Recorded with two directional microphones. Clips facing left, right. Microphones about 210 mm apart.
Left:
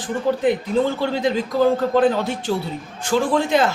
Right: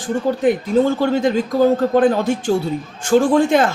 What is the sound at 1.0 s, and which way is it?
A man's voice, 45° right (ahead or behind).